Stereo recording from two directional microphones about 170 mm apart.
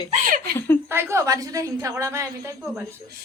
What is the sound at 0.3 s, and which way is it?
Laughter, 55° right (ahead or behind).